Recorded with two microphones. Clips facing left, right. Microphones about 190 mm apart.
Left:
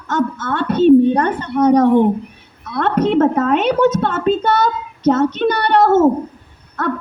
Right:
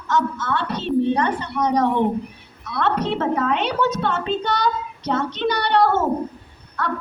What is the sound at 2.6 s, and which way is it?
A woman's voice, 50° left (ahead or behind).